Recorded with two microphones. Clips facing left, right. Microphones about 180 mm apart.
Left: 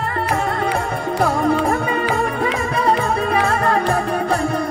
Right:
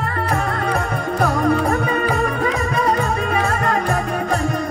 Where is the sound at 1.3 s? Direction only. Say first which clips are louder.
Even; 25° left (ahead or behind).